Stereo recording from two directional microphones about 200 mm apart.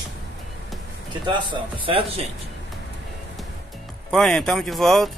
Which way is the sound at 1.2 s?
25° right (ahead or behind).